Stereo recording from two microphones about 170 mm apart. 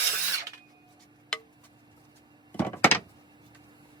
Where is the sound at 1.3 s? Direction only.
5° left (ahead or behind).